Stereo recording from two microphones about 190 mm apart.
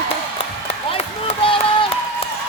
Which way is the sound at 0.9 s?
30° left (ahead or behind).